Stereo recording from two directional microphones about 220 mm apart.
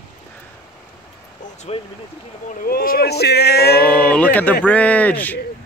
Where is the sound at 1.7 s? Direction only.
30° left (ahead or behind).